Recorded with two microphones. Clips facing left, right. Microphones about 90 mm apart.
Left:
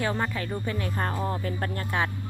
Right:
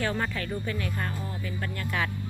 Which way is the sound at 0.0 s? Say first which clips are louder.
Left 1 dB; 25° left (ahead or behind).